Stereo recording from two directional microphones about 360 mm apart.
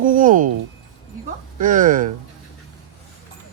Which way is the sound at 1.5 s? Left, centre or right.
Right.